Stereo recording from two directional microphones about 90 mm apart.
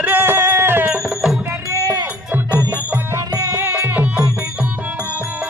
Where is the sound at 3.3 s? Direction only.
40° right (ahead or behind).